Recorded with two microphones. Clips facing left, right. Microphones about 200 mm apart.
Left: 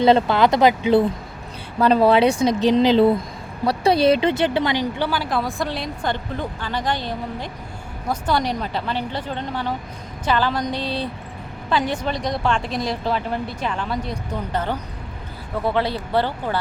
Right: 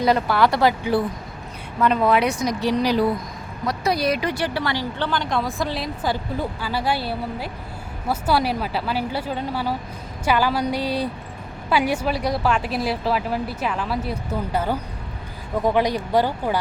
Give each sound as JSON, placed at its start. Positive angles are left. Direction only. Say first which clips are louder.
{"t": 0.0, "sound": "speech", "louder": "left 3 dB", "side_deg": 25}
{"t": 1.8, "sound": "speech", "louder": "left 4 dB", "side_deg": 35}